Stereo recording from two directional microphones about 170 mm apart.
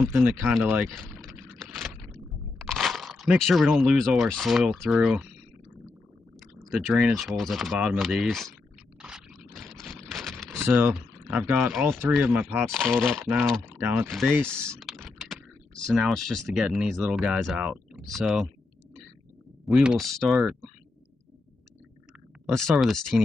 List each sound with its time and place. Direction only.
0.1 s speech: 10° right (ahead or behind)
0.8 s vehicle: centre (ahead or behind)
2.6 s speech: centre (ahead or behind)
6.6 s speech: centre (ahead or behind)
9.0 s scrape: centre (ahead or behind)
10.5 s speech: 15° right (ahead or behind)
13.0 s speech: centre (ahead or behind)
19.6 s speech: 5° right (ahead or behind)
22.5 s speech: centre (ahead or behind)